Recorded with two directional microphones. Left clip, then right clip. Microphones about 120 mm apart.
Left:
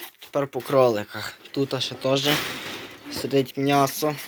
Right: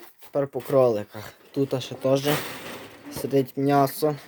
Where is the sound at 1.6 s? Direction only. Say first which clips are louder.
Even; 55° right (ahead or behind).